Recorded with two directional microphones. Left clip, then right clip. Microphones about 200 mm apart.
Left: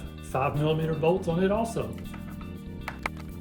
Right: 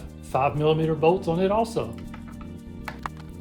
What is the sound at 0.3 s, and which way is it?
Speech, 45° right (ahead or behind).